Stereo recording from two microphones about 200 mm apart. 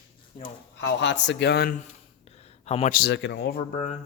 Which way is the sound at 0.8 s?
60° left (ahead or behind).